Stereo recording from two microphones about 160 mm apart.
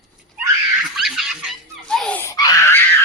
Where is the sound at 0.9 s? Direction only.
Centre (ahead or behind).